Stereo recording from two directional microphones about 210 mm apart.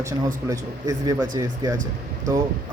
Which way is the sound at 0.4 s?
15° right (ahead or behind).